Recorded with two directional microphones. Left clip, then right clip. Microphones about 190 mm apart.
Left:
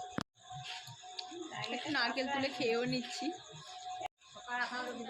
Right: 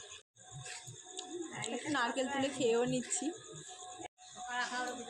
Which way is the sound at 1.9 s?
15° right (ahead or behind).